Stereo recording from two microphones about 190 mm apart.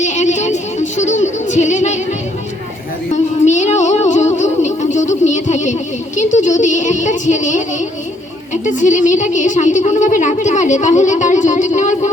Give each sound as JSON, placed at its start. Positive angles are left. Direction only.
{"t": 0.0, "sound": "music", "side_deg": 40}
{"t": 3.1, "sound": "music", "side_deg": 40}
{"t": 8.6, "sound": "a woman's voice", "side_deg": 40}